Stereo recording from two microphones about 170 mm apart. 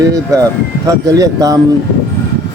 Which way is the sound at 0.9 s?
20° right (ahead or behind).